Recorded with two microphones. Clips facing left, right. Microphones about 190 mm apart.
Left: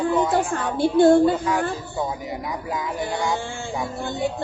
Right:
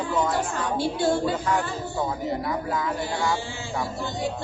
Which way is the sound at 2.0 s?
15° left (ahead or behind).